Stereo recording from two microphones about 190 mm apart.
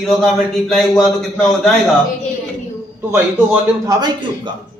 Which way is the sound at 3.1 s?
15° right (ahead or behind).